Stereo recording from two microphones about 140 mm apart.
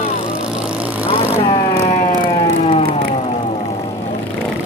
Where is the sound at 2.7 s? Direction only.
45° left (ahead or behind).